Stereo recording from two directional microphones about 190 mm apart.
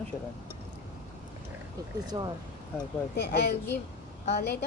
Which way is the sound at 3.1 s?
60° left (ahead or behind).